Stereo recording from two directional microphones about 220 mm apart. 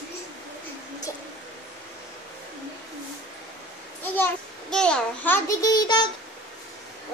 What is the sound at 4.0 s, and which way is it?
A child's voice, 5° left (ahead or behind).